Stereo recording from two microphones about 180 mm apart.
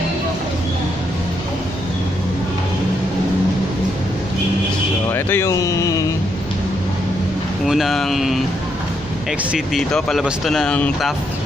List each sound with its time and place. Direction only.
5.1 s a sound: 15° left (ahead or behind)
7.6 s speech: centre (ahead or behind)
9.5 s speech: centre (ahead or behind)